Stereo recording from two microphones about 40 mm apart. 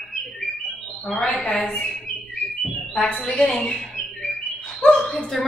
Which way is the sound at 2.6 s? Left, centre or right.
Centre.